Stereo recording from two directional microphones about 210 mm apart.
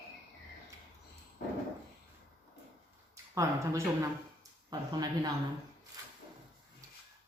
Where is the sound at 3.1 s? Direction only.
15° right (ahead or behind).